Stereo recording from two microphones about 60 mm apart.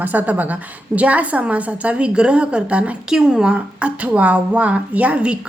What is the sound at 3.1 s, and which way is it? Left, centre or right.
A woman's voice, centre.